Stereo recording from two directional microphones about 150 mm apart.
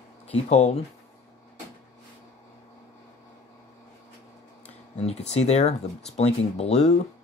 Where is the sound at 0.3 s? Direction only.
50° left (ahead or behind).